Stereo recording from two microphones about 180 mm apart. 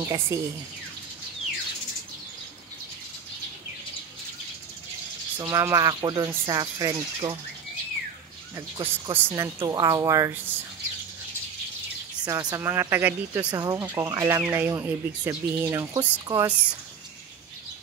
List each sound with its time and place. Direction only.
0.0 s speech: 15° right (ahead or behind)
5.4 s speech: 15° right (ahead or behind)
8.5 s speech: 20° right (ahead or behind)
12.3 s speech: 20° right (ahead or behind)
13.5 s speech: 20° right (ahead or behind)